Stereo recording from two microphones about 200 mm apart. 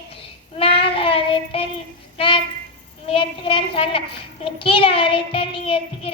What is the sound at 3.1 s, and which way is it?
Child singing, 25° left (ahead or behind).